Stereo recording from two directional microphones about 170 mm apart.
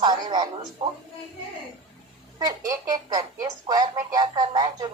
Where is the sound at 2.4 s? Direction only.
20° right (ahead or behind).